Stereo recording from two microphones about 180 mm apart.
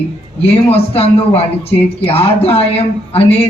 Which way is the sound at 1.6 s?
30° left (ahead or behind).